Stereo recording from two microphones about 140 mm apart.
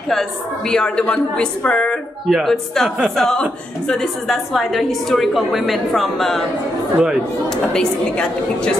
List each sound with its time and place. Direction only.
0.1 s a woman's voice: 5° left (ahead or behind)
7.7 s a woman's voice: 5° left (ahead or behind)